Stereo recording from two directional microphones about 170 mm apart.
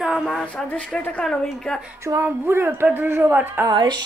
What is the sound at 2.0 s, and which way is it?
Speech, 15° right (ahead or behind).